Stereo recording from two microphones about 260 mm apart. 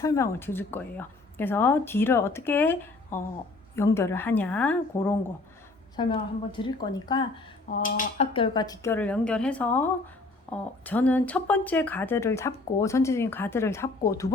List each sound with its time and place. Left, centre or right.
0.0 s speech: centre
6.0 s speech: centre
7.8 s speech: left; by 14.3 s centre